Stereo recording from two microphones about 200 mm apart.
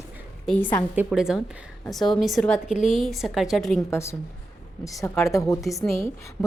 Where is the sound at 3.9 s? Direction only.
15° left (ahead or behind).